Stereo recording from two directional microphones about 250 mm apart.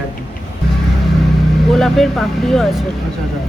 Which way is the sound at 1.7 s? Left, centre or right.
Centre.